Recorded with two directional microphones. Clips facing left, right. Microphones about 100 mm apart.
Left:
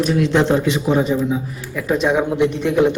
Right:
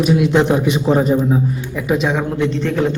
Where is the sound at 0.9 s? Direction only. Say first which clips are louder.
Right 4 dB; 40° right (ahead or behind).